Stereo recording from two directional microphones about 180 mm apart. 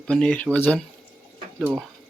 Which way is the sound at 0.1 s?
5° left (ahead or behind).